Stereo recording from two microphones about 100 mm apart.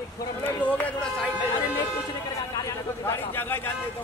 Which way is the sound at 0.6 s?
15° left (ahead or behind).